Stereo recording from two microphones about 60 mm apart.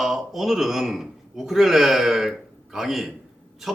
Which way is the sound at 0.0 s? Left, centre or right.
Centre.